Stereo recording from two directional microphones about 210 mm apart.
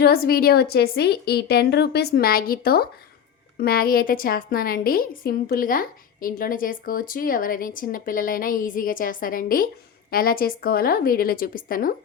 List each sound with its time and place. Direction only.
0.0 s a woman's voice: 45° left (ahead or behind)